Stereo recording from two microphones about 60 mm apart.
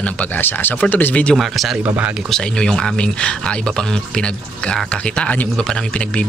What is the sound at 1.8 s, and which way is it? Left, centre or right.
Speech, right.